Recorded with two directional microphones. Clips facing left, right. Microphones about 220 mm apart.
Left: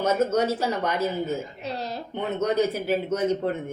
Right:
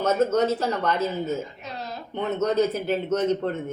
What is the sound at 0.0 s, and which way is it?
Speech, 10° left (ahead or behind).